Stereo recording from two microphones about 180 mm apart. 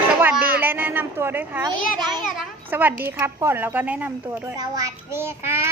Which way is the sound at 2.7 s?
10° right (ahead or behind).